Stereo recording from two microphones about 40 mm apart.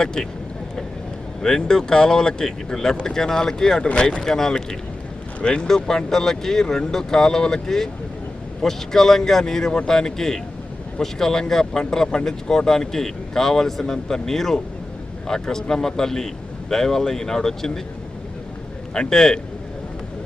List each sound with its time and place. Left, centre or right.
0.0 s speech: centre
1.4 s speech: centre
5.4 s speech: left
18.9 s speech: centre